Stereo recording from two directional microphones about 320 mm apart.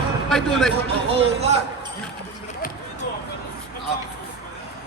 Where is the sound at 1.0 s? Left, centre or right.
Centre.